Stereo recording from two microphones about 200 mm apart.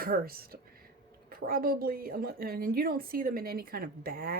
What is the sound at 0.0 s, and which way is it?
A woman's voice, 45° right (ahead or behind).